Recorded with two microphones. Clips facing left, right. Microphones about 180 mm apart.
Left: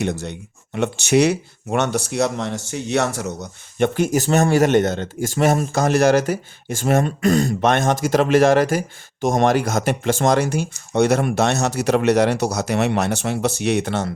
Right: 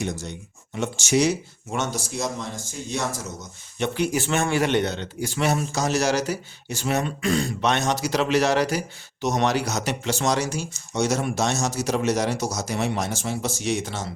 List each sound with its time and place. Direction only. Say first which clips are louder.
0.0 s speech: left 6 dB; 65° left (ahead or behind)